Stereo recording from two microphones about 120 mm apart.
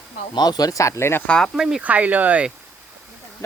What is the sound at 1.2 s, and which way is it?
Speech, 5° left (ahead or behind).